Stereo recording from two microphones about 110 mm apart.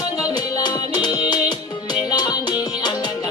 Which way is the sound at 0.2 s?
35° left (ahead or behind).